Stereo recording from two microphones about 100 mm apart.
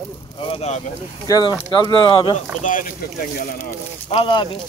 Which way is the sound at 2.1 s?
60° left (ahead or behind).